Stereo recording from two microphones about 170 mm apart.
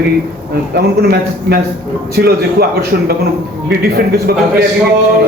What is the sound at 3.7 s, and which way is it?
Speech, 70° right (ahead or behind).